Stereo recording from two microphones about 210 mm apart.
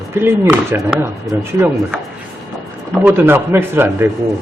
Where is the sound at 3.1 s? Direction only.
10° right (ahead or behind).